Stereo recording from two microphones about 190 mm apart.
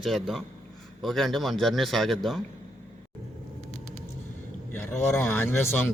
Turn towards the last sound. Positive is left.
turn(degrees=10)  # may be behind; listen again after turning